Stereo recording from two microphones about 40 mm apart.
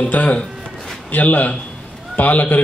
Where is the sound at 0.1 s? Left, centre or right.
Left.